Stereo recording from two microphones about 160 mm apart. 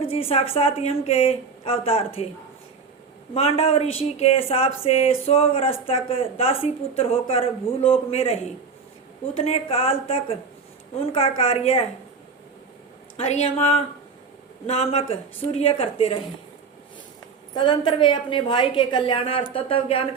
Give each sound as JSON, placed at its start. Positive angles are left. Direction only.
{"t": 0.0, "sound": "a woman's voice", "side_deg": 35}
{"t": 3.3, "sound": "a woman's voice", "side_deg": 40}
{"t": 13.1, "sound": "a woman's voice", "side_deg": 40}
{"t": 17.5, "sound": "a woman's voice", "side_deg": 30}